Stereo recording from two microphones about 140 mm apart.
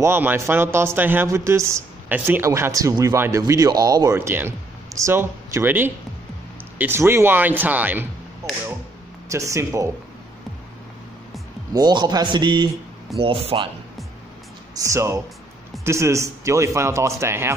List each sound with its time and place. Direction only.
0.0 s speech: 15° right (ahead or behind)
4.1 s a man's voice: 15° right (ahead or behind)
9.3 s speech: 20° right (ahead or behind)
11.7 s a man's voice: 30° right (ahead or behind)
14.8 s speech: 20° right (ahead or behind)